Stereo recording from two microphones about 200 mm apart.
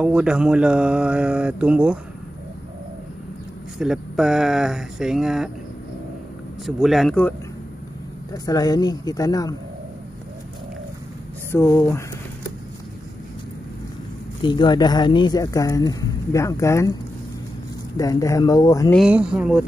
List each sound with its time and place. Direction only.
0.0 s speech: 5° right (ahead or behind)
3.8 s speech: centre (ahead or behind)
6.6 s speech: centre (ahead or behind)
8.3 s speech: 20° left (ahead or behind)
11.5 s speech: 10° left (ahead or behind)
14.4 s speech: 20° left (ahead or behind)
17.9 s speech: 15° left (ahead or behind)
18.9 s speech: 5° right (ahead or behind)